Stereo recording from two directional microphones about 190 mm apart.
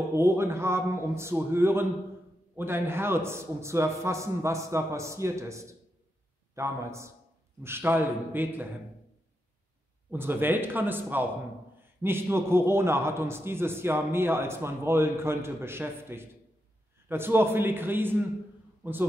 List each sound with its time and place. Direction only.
0.1 s a man's voice: 15° right (ahead or behind)
10.1 s a man's voice: 10° right (ahead or behind)